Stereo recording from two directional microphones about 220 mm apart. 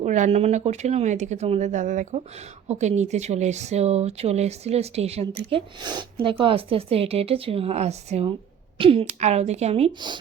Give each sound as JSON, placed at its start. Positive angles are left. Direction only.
{"t": 0.0, "sound": "speech", "side_deg": -30}